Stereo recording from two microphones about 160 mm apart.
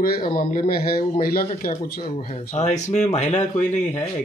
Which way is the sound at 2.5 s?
45° left (ahead or behind).